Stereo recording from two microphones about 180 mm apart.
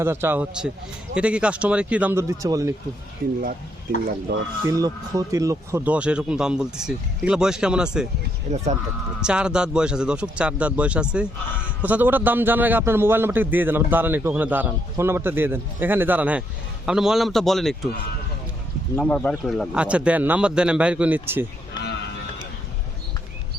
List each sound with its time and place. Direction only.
0.0 s a man's voice: 15° right (ahead or behind)
3.9 s speech: 50° right (ahead or behind)
4.6 s speech: 20° right (ahead or behind)
8.5 s speech: 40° right (ahead or behind)
9.2 s a man's voice: 5° right (ahead or behind)
18.9 s a man's voice: 10° left (ahead or behind); by 21.4 s 10° right (ahead or behind)